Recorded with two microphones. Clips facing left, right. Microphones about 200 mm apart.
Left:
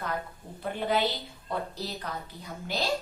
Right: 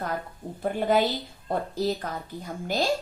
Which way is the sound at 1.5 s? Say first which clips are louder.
Right 7 dB; 45° right (ahead or behind).